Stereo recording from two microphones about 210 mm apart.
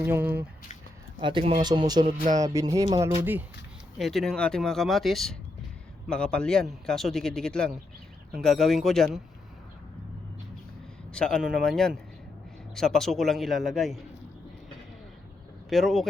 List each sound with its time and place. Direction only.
0.0 s speech: 10° right (ahead or behind)
1.2 s a man's voice: 25° right (ahead or behind)
3.9 s a man's voice: centre (ahead or behind)
11.1 s a man's voice: 5° left (ahead or behind)
15.7 s a man's voice: centre (ahead or behind)